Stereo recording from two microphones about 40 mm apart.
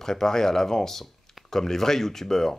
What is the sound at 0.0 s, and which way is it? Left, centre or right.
Speech, centre.